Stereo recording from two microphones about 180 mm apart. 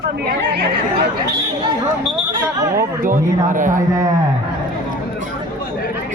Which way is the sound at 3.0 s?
50° right (ahead or behind).